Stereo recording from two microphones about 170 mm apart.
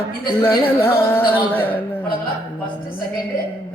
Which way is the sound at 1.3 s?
10° left (ahead or behind).